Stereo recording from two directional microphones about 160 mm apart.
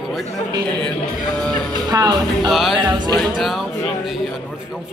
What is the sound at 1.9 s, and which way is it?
Speech, 25° right (ahead or behind).